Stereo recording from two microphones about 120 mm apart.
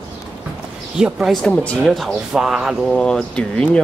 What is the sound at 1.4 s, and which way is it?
Speech, 5° left (ahead or behind).